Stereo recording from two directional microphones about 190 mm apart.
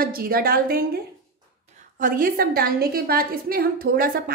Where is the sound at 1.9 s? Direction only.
45° right (ahead or behind).